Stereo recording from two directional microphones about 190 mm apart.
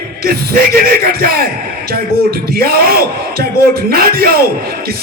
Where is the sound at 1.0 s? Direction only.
50° right (ahead or behind).